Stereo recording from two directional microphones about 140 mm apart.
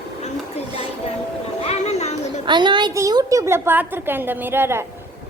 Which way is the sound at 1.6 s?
50° left (ahead or behind).